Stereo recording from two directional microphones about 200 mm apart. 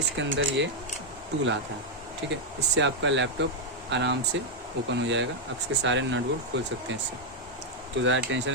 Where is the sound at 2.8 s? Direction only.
65° right (ahead or behind).